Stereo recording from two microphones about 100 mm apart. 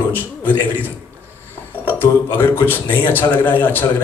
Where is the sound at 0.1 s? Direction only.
20° left (ahead or behind).